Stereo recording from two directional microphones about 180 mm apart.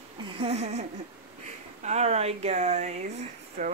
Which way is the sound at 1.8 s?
35° right (ahead or behind).